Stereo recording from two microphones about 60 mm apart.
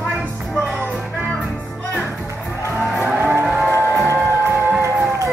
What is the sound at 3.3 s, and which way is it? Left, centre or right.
Music, right.